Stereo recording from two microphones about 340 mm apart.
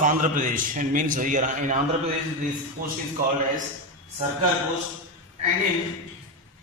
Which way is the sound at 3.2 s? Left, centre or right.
Right.